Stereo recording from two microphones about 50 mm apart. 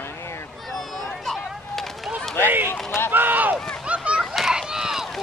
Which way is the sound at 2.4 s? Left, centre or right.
Right.